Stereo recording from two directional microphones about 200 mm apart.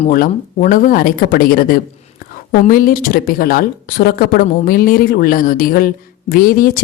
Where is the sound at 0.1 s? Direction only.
45° left (ahead or behind).